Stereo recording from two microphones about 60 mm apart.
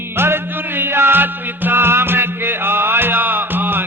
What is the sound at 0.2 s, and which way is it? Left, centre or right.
Music, right.